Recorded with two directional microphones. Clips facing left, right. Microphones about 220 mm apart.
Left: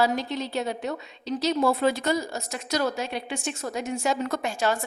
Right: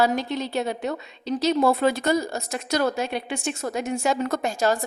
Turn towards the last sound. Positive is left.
turn(degrees=-40)  # may be behind; listen again after turning